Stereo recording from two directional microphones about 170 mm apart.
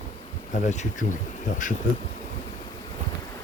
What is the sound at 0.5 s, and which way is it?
Speech, 45° left (ahead or behind).